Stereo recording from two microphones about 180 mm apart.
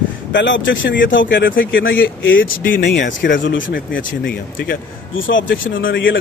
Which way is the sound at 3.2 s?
90° left.